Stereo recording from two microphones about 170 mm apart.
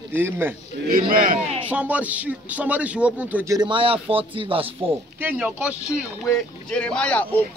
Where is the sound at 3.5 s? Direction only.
30° right (ahead or behind).